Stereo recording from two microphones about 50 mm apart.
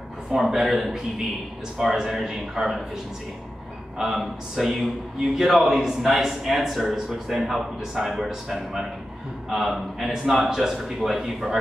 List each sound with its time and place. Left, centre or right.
0.5 s speech: centre
4.0 s a man's voice: centre